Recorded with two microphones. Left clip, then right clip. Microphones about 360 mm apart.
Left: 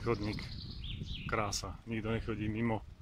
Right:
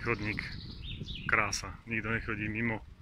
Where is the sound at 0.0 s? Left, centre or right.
Centre.